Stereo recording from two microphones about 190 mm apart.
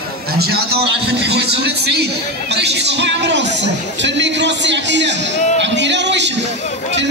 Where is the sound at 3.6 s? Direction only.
65° right (ahead or behind).